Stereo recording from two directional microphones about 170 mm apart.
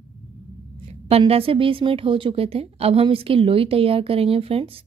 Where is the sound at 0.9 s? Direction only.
35° right (ahead or behind).